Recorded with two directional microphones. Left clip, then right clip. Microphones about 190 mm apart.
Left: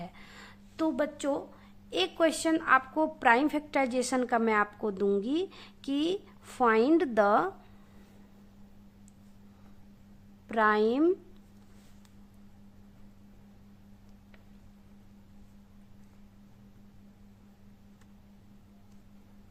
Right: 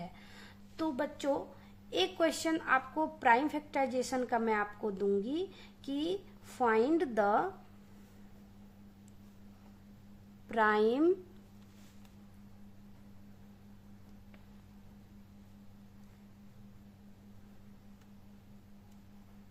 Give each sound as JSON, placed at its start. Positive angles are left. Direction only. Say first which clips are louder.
{"t": 0.0, "sound": "a sound", "louder": "left 3 dB", "side_deg": 25}
{"t": 1.9, "sound": "a woman's voice", "louder": "left 4 dB", "side_deg": 20}
{"t": 10.5, "sound": "a woman's voice", "louder": "left 3 dB", "side_deg": 20}